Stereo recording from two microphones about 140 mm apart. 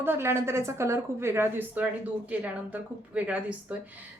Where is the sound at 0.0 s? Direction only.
15° right (ahead or behind).